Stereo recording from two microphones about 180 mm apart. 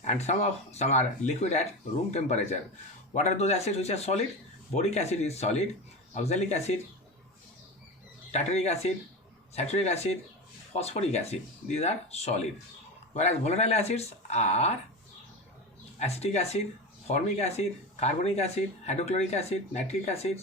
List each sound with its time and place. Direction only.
0.0 s speech: 40° left (ahead or behind)
8.3 s speech: 35° left (ahead or behind)
16.0 s speech: 35° left (ahead or behind)